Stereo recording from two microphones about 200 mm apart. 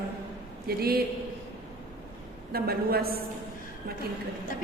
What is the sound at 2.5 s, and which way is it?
Speech, 50° right (ahead or behind).